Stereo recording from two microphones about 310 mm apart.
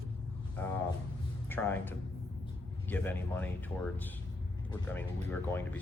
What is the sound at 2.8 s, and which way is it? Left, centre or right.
Speech, centre.